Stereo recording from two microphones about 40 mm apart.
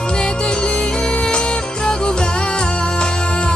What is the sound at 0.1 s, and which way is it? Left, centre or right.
Music, left.